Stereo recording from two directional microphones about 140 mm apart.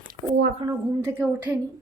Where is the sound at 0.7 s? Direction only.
20° right (ahead or behind).